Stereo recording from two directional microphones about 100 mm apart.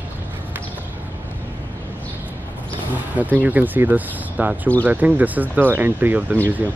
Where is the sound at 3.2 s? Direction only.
15° right (ahead or behind).